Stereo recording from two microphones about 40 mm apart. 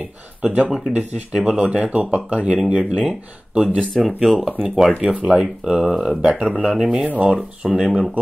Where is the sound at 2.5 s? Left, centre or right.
Centre.